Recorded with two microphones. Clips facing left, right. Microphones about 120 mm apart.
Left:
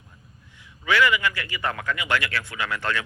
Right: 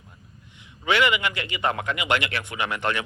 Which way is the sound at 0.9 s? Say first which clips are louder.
Left 1 dB; 25° right (ahead or behind).